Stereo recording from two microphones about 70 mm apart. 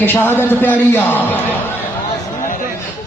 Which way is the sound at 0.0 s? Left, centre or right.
Left.